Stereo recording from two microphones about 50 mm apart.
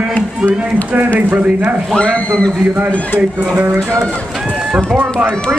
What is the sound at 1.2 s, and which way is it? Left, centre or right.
Speech, right.